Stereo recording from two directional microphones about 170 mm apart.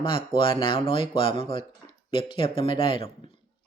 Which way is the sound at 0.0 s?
30° left (ahead or behind).